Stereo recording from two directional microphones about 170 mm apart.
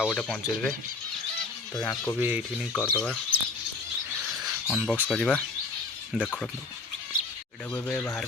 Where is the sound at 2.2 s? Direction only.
10° right (ahead or behind).